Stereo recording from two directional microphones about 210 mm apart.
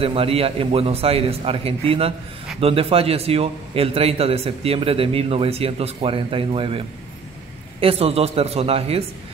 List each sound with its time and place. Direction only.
0.0 s a man's voice: 25° right (ahead or behind)
7.8 s a man's voice: 30° right (ahead or behind)